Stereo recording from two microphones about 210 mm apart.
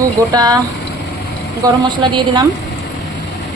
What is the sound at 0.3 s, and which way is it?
Speech, 20° right (ahead or behind).